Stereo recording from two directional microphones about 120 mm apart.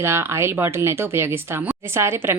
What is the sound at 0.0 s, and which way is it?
Speech, 20° right (ahead or behind).